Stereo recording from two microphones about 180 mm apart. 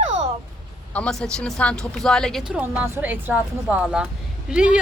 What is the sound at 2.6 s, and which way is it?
A woman's voice, 10° right (ahead or behind).